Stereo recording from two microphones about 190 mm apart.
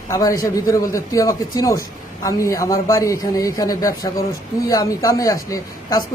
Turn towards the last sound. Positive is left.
turn(degrees=20)  # may be behind; listen again after turning